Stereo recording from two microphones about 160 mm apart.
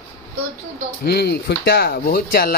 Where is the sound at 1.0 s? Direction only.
90° left; by 2.5 s 70° left (ahead or behind).